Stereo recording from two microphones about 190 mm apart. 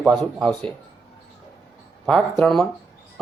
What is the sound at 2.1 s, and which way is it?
Speech, centre (ahead or behind).